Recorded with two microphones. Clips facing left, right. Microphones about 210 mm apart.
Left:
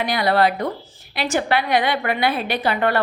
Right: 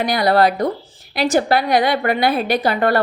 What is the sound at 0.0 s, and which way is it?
A woman's voice, 40° right (ahead or behind).